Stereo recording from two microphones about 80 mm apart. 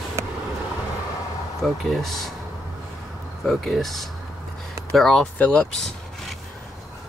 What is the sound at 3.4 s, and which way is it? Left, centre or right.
Speech, centre.